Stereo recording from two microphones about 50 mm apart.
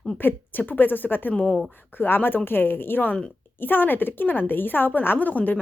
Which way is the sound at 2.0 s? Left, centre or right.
Left.